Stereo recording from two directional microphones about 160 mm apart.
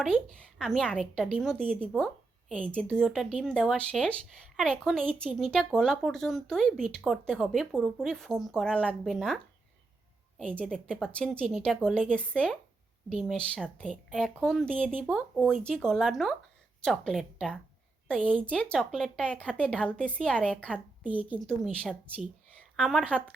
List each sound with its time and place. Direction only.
0.0 s a woman's voice: 5° left (ahead or behind)
21.0 s a woman's voice: 10° right (ahead or behind)
21.4 s a woman's voice: 5° left (ahead or behind)